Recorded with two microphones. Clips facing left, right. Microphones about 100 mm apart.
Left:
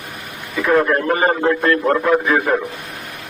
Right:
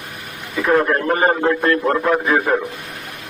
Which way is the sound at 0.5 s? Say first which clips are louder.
Left 1 dB; 5° right (ahead or behind).